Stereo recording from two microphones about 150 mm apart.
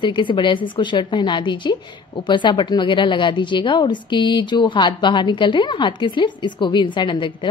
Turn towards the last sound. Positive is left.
turn(degrees=30)  # may be behind; listen again after turning